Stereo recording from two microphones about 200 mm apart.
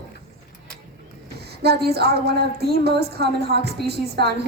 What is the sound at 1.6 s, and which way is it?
A woman's voice, 55° right (ahead or behind).